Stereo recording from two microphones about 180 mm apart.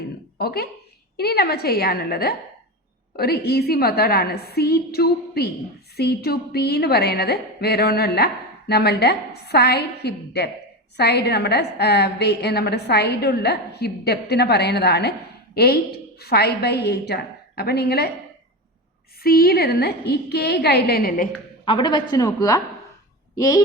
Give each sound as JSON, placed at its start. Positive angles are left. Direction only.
{"t": 0.3, "sound": "a woman's voice", "side_deg": 60}
{"t": 19.2, "sound": "a woman's voice", "side_deg": 55}
{"t": 21.6, "sound": "a woman's voice", "side_deg": 25}